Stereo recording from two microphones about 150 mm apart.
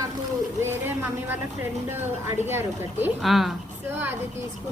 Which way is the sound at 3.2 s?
Centre (ahead or behind).